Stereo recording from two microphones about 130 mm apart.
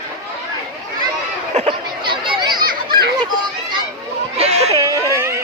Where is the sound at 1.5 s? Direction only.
45° right (ahead or behind).